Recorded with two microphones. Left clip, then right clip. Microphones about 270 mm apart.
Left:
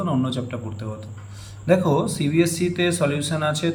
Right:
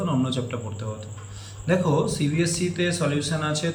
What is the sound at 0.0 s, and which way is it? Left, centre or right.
Speech, centre.